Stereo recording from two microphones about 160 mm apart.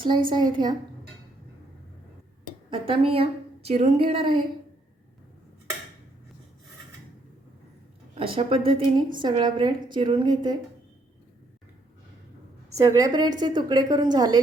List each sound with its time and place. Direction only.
0.3 s a woman's voice: 30° right (ahead or behind)
2.6 s a woman's voice: 35° right (ahead or behind)
8.1 s a woman's voice: 35° right (ahead or behind)
12.7 s a woman's voice: 20° right (ahead or behind)